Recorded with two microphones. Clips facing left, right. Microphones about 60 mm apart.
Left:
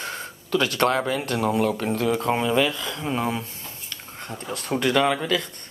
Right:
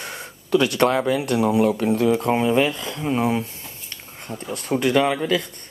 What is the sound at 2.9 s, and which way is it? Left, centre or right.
Speech, centre.